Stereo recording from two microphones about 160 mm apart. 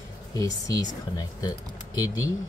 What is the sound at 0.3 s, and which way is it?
Speech, 20° left (ahead or behind).